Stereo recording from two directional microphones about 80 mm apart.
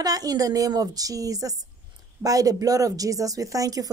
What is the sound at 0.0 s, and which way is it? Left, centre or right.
Speech, right.